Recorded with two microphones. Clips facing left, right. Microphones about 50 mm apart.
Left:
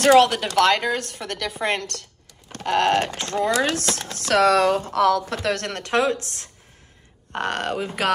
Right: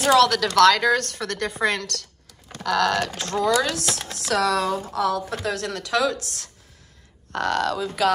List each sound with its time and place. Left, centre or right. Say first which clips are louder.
0.3 s speech: right 2 dB; left